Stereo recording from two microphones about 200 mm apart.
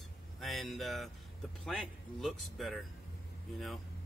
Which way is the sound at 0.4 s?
Centre (ahead or behind).